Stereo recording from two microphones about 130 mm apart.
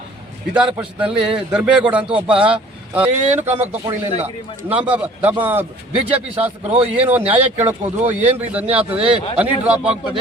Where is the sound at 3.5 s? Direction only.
15° right (ahead or behind).